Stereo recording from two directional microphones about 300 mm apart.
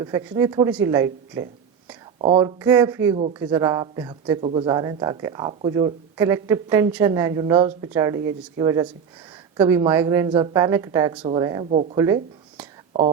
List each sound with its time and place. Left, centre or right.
0.0 s speech: centre
3.2 s speech: right
11.9 s a sound: centre